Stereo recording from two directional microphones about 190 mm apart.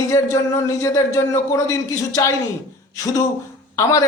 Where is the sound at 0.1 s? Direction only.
15° left (ahead or behind).